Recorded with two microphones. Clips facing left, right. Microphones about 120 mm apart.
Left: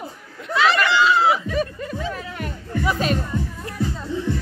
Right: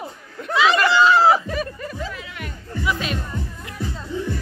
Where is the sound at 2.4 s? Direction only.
40° left (ahead or behind).